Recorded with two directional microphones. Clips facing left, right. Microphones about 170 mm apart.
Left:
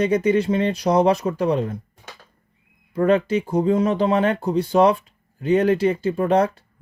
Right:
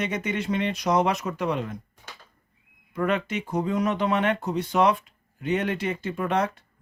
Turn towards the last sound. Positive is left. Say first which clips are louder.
# left 7 dB
turn(degrees=35)  # may be behind; listen again after turning